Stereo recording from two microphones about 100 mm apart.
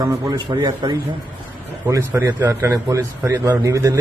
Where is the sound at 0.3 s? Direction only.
50° right (ahead or behind).